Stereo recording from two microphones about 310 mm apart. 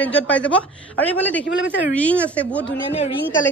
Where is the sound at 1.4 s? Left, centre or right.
Left.